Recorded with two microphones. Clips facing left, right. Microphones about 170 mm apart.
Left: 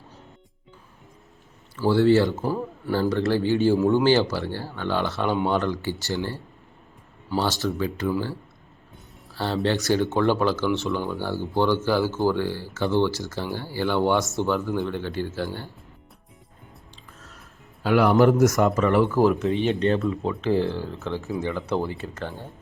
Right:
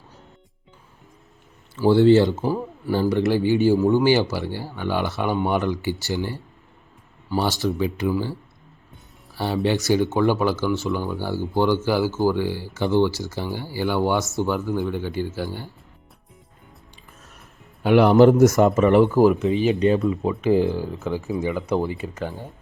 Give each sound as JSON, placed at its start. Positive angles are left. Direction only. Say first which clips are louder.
{"t": 1.8, "sound": "speech", "louder": "right 4 dB", "side_deg": -20}
{"t": 2.4, "sound": "speech", "louder": "right 2 dB", "side_deg": -5}
{"t": 2.9, "sound": "speech", "louder": "right 2 dB", "side_deg": -15}
{"t": 3.8, "sound": "speech", "louder": "right 2 dB", "side_deg": 0}
{"t": 4.0, "sound": "speech", "louder": "right 1 dB", "side_deg": -10}
{"t": 7.6, "sound": "speech", "louder": "right 3 dB", "side_deg": -15}
{"t": 9.3, "sound": "speech", "louder": "right 2 dB", "side_deg": -15}
{"t": 17.8, "sound": "speech", "louder": "right 4 dB", "side_deg": -25}
{"t": 19.3, "sound": "speech", "louder": "right 3 dB", "side_deg": 0}